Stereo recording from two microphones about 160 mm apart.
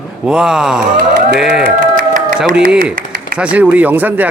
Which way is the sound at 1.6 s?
60° right (ahead or behind).